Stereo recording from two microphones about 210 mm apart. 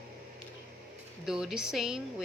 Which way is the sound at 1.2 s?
5° right (ahead or behind).